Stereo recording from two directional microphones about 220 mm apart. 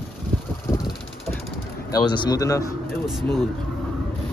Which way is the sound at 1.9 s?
20° left (ahead or behind).